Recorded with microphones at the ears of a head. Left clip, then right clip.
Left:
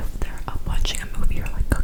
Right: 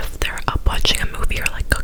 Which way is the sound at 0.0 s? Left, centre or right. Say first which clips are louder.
Right 12 dB; right.